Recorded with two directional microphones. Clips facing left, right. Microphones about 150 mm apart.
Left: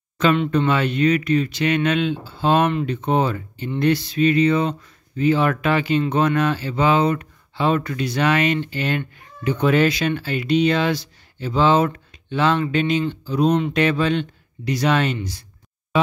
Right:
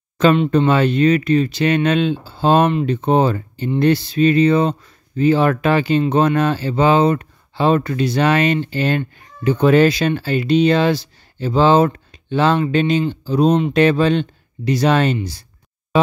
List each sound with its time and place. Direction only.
0.2 s speech: 30° right (ahead or behind)